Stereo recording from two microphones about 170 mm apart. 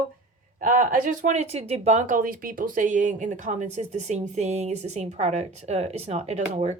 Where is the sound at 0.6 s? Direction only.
50° right (ahead or behind).